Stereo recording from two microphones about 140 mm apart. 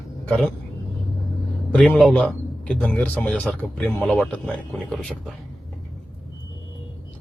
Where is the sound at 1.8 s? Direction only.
Centre (ahead or behind).